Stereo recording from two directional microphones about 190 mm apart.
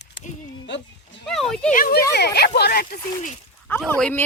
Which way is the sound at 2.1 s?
60° left (ahead or behind).